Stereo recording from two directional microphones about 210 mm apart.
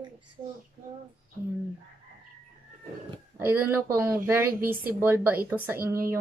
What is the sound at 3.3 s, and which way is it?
A woman's voice, 10° right (ahead or behind).